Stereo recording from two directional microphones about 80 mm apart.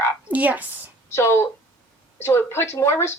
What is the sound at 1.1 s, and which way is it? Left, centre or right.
A woman's voice, left.